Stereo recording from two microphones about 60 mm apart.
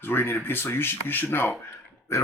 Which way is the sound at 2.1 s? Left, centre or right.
Left.